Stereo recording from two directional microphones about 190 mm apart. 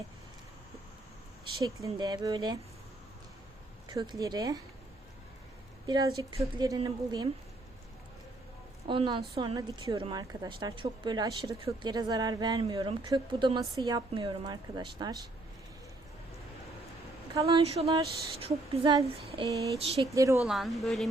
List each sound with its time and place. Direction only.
1.6 s a woman's voice: 20° right (ahead or behind)
3.8 s a woman's voice: 20° right (ahead or behind)
5.8 s a woman's voice: 20° right (ahead or behind)
8.9 s a woman's voice: 25° right (ahead or behind)
17.4 s a woman's voice: 30° right (ahead or behind)
20.1 s a woman's voice: 15° right (ahead or behind)
20.4 s a woman's voice: centre (ahead or behind)